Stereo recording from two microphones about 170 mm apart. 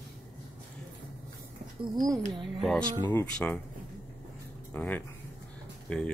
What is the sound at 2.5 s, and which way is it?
Speech, centre (ahead or behind).